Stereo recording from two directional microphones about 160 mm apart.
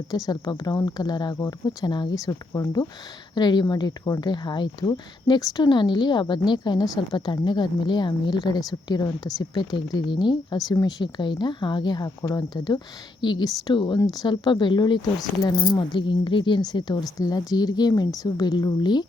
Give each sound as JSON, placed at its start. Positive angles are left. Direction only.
{"t": 0.3, "sound": "speech", "side_deg": 20}